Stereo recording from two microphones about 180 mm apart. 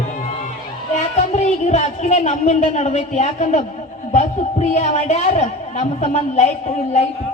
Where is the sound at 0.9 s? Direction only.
40° left (ahead or behind).